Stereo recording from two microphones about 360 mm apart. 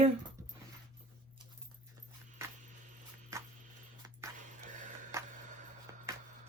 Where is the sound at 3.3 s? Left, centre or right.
Centre.